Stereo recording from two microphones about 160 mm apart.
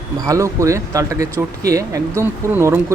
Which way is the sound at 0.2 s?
20° right (ahead or behind).